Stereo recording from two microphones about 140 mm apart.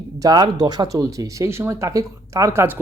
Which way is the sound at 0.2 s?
30° right (ahead or behind).